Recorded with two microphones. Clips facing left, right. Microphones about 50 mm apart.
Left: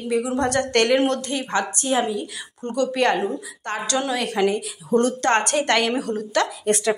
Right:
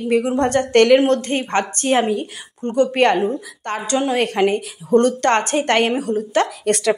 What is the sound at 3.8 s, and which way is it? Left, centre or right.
Speech, right.